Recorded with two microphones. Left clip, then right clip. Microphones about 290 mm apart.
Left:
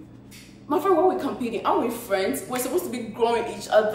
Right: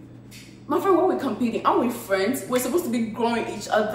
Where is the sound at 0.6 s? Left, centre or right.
Centre.